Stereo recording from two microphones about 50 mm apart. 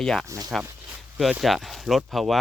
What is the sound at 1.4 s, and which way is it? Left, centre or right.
Speech, centre.